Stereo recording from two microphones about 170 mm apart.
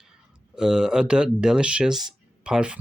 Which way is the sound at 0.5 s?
5° right (ahead or behind).